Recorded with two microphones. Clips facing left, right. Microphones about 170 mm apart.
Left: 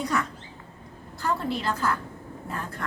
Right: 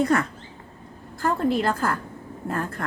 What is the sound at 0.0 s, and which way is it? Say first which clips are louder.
Speech: right 7 dB; 55° right (ahead or behind).